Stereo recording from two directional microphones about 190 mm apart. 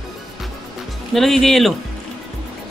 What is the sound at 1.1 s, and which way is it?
Speech, centre (ahead or behind).